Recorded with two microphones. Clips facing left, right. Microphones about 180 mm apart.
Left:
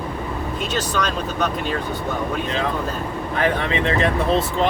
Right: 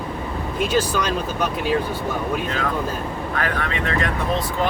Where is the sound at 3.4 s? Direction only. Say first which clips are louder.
Left 6 dB; 25° left (ahead or behind).